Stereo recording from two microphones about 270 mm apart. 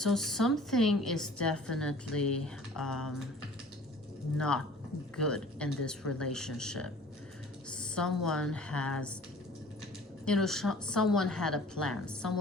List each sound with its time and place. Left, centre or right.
0.0 s a woman's voice: centre
4.4 s a woman's voice: centre
10.2 s a woman's voice: centre